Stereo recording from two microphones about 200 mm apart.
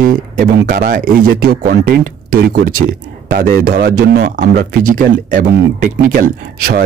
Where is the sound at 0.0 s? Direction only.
50° right (ahead or behind).